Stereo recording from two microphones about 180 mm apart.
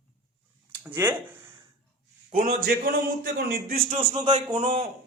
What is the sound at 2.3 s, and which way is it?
Speech, 35° right (ahead or behind).